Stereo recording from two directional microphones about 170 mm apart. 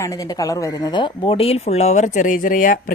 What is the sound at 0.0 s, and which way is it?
Speech, 20° left (ahead or behind).